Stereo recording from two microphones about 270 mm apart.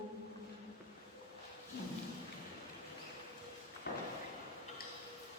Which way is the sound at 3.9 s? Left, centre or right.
Left.